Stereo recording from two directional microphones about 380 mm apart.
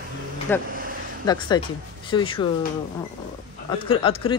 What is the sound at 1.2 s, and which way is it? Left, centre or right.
Speech, centre.